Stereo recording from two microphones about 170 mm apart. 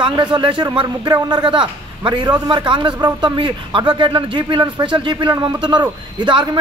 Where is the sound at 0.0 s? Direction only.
25° right (ahead or behind).